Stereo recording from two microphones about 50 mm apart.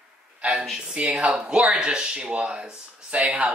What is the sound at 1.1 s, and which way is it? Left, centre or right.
Speech, centre.